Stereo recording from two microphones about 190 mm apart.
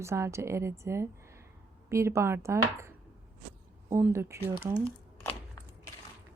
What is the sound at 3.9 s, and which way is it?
Speech, 15° right (ahead or behind).